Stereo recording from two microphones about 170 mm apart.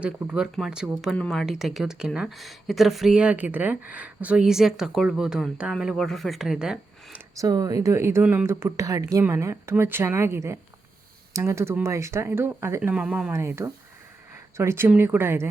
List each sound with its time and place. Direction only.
0.0 s a woman's voice: 5° right (ahead or behind)
7.3 s speech: 20° right (ahead or behind)